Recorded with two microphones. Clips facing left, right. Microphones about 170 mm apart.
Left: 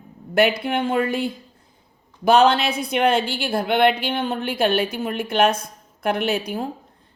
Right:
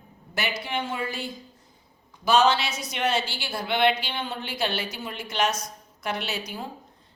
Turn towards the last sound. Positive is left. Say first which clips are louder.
# left 9 dB
turn(degrees=55)  # may be behind; listen again after turning